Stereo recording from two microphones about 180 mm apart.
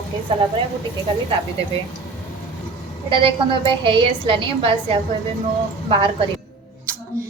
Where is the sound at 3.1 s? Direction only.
30° right (ahead or behind).